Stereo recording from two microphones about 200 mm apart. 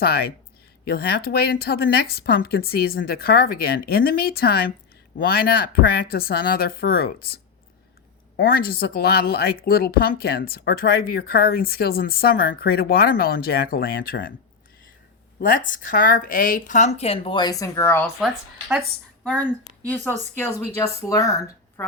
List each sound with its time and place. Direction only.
0.0 s a woman's voice: 50° left (ahead or behind)
8.4 s a woman's voice: 45° left (ahead or behind)
15.4 s speech: 40° left (ahead or behind); by 18.0 s 15° left (ahead or behind)
19.2 s speech: 5° left (ahead or behind)